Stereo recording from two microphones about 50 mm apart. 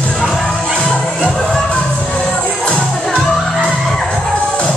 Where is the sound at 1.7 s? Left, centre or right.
Left.